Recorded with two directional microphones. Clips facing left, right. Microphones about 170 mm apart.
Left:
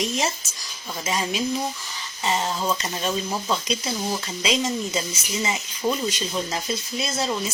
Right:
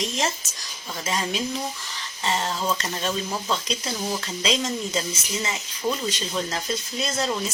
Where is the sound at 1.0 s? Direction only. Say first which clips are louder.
Left 2 dB; 10° left (ahead or behind).